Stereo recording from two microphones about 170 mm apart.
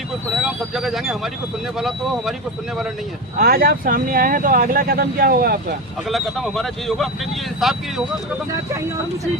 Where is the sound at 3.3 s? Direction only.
60° right (ahead or behind).